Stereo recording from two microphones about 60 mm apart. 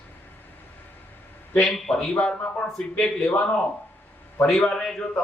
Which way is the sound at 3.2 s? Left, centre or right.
Left.